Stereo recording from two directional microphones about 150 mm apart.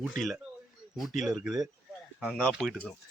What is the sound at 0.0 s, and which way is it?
Speech, centre (ahead or behind).